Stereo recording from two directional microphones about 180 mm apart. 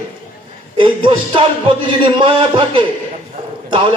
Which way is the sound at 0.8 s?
30° right (ahead or behind).